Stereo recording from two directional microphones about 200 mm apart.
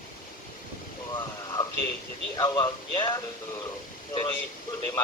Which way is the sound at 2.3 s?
20° left (ahead or behind).